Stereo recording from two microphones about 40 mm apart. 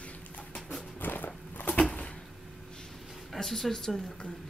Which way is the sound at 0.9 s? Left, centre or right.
Left.